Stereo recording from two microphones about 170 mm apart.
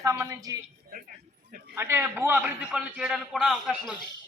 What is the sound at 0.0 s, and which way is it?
Speech, 20° right (ahead or behind).